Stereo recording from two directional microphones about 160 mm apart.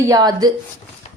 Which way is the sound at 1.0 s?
45° left (ahead or behind).